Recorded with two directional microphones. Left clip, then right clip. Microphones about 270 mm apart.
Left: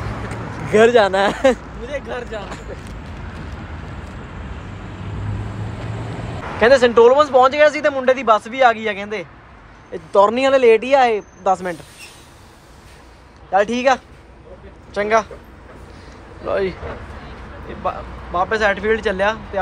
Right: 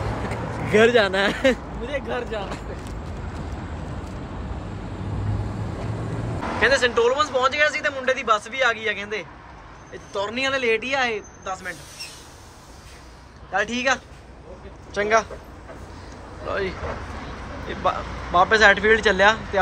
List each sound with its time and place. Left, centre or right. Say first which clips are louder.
0.3 s speech: left 4 dB; centre
1.8 s speech: left 1 dB; centre
6.6 s a man's voice: left 8 dB; centre
13.5 s a man's voice: left 7 dB; centre
16.4 s a man's voice: left 6 dB; centre